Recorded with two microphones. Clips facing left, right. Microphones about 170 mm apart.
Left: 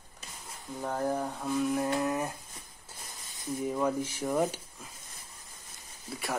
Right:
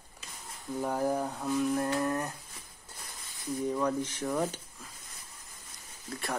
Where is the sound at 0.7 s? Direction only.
5° right (ahead or behind).